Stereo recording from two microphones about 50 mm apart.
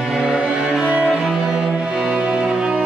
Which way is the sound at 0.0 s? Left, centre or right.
Centre.